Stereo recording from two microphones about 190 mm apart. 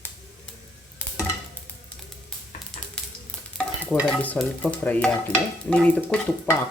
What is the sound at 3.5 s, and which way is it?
Stir, 5° left (ahead or behind).